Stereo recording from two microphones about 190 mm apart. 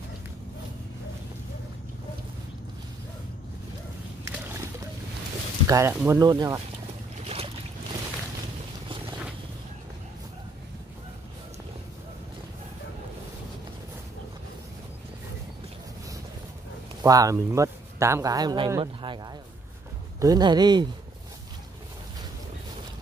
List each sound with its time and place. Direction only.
4.2 s splash: 15° right (ahead or behind)
5.7 s speech: 15° right (ahead or behind)
7.2 s boat: 30° right (ahead or behind)
17.0 s a man's voice: 15° right (ahead or behind)